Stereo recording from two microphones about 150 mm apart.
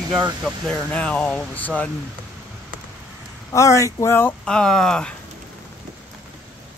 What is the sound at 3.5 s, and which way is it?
Speech, 20° left (ahead or behind).